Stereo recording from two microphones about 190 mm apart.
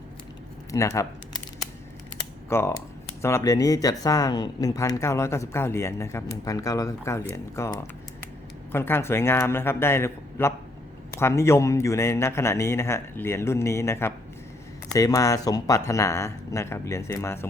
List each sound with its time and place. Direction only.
0.7 s speech: 15° left (ahead or behind)
2.5 s speech: 15° left (ahead or behind)